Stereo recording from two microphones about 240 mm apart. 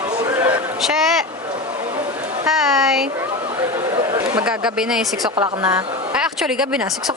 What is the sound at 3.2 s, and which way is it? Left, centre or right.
Chatter, centre.